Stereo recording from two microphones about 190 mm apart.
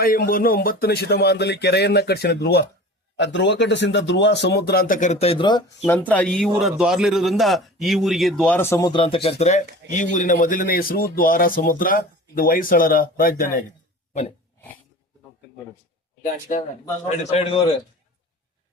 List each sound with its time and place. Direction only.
0.0 s speech: 50° left (ahead or behind); by 5.6 s 25° left (ahead or behind)
5.8 s a man's voice: 10° left (ahead or behind); by 13.7 s 50° left (ahead or behind)
14.1 s a sound: 35° left (ahead or behind)
16.5 s speech: 40° left (ahead or behind)